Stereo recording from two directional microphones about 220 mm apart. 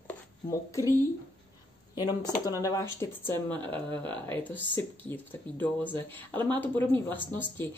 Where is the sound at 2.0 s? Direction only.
15° left (ahead or behind).